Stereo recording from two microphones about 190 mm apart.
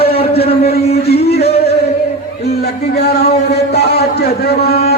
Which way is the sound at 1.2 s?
60° left (ahead or behind).